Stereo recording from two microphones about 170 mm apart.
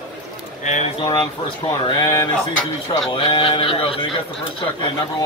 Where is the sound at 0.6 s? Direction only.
45° left (ahead or behind).